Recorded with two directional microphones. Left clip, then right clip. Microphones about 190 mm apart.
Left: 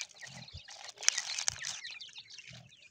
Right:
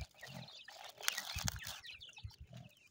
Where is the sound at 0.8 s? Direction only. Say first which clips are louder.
Left 8 dB; 45° right (ahead or behind).